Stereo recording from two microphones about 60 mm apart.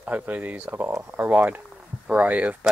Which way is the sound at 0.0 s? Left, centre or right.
Right.